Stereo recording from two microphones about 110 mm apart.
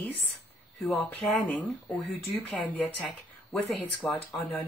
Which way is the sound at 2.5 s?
15° left (ahead or behind).